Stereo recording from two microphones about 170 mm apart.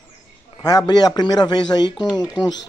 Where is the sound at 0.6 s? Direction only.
25° left (ahead or behind).